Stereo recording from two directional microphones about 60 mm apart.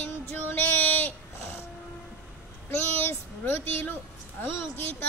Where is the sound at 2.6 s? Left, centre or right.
Left.